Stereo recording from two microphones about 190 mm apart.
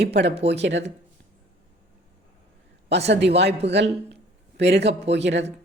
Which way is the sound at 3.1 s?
65° right (ahead or behind).